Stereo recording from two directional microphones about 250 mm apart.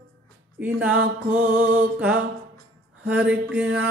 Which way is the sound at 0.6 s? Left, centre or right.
Centre.